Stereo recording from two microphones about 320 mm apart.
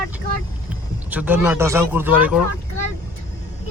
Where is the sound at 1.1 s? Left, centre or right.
Centre.